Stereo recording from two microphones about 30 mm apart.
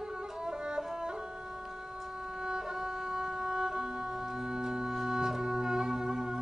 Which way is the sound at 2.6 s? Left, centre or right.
Centre.